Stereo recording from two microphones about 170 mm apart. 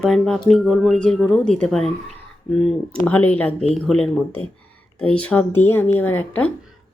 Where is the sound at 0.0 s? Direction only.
5° left (ahead or behind).